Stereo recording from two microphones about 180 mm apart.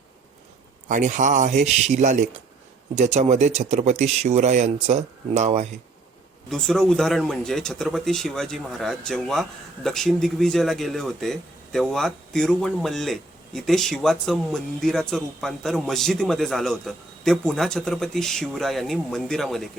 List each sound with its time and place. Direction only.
0.9 s a man's voice: 45° right (ahead or behind)
6.5 s speech: 5° left (ahead or behind)